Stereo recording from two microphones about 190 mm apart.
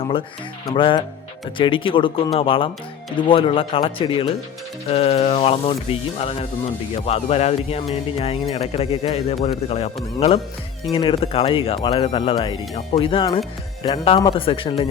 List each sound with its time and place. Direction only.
0.7 s speech: 25° left (ahead or behind)